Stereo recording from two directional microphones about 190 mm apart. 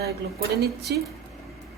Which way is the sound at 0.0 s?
55° right (ahead or behind).